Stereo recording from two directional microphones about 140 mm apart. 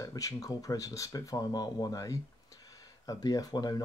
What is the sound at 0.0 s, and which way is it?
Speech, 25° left (ahead or behind).